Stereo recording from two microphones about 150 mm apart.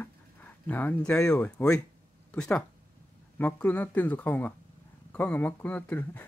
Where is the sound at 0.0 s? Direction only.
10° left (ahead or behind).